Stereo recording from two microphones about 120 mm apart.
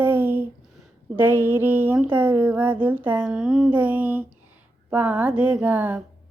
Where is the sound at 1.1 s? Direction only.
15° right (ahead or behind).